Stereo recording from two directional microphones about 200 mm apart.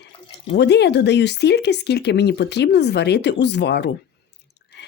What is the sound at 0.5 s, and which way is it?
Speech, 60° left (ahead or behind).